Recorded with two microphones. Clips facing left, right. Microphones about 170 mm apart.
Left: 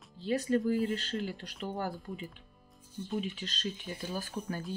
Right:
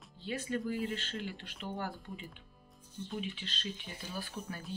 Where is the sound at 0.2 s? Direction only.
40° left (ahead or behind).